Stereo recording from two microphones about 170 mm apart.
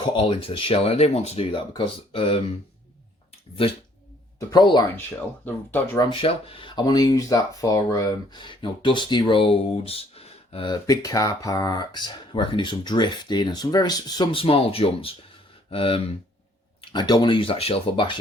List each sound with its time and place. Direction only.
0.0 s speech: 30° left (ahead or behind)
4.4 s speech: 25° left (ahead or behind)
5.5 s speech: 10° left (ahead or behind)
6.1 s speech: 30° left (ahead or behind)